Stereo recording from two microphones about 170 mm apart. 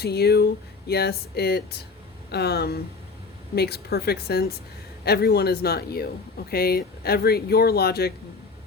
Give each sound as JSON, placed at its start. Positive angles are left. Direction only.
{"t": 0.0, "sound": "speech", "side_deg": 70}